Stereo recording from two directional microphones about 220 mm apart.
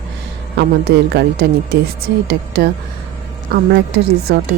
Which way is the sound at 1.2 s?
50° right (ahead or behind).